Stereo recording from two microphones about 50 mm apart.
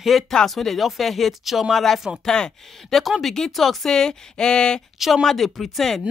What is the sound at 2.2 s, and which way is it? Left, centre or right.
Speech, centre.